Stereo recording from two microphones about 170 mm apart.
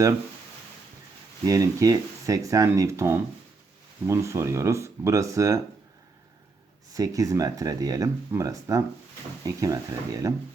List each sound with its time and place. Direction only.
1.5 s speech: 20° right (ahead or behind)
6.9 s speech: 20° right (ahead or behind)